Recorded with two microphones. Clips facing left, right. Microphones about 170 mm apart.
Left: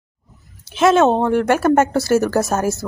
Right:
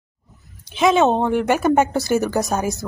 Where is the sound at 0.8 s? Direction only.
Centre (ahead or behind).